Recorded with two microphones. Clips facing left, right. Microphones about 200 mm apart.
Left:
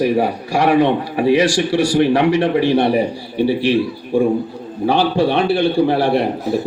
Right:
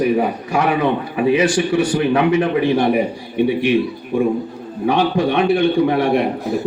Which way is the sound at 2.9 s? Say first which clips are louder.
Even; 30° left (ahead or behind).